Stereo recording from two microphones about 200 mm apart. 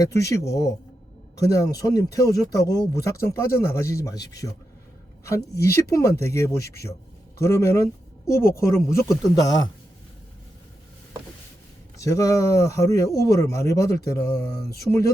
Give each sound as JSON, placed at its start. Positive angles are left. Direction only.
{"t": 0.0, "sound": "speech", "side_deg": 15}
{"t": 1.5, "sound": "speech", "side_deg": 15}
{"t": 11.9, "sound": "speech", "side_deg": 15}